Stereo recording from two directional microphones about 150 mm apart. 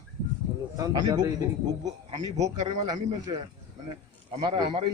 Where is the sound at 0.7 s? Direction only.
25° right (ahead or behind).